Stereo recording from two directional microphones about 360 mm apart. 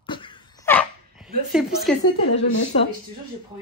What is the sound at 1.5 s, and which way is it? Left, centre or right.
Speech, centre.